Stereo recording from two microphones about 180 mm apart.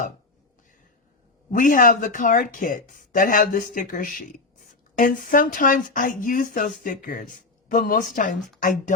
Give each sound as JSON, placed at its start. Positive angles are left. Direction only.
{"t": 1.5, "sound": "speech", "side_deg": 50}